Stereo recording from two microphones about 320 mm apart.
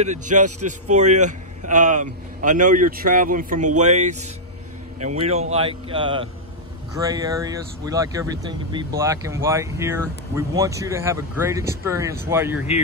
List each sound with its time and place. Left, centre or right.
0.0 s a man's voice: right; by 12.6 s centre